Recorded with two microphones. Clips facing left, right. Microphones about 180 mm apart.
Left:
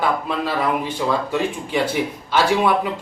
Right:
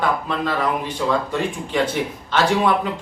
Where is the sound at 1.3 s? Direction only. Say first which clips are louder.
Left 1 dB; 10° left (ahead or behind).